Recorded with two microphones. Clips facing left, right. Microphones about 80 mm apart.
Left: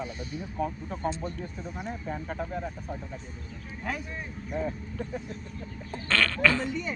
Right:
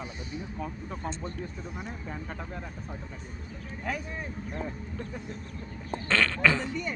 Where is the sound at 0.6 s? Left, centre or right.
Centre.